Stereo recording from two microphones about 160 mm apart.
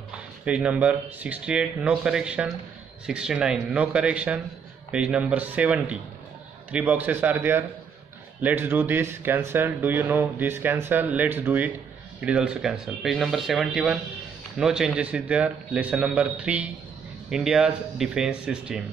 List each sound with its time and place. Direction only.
0.5 s speech: 10° right (ahead or behind)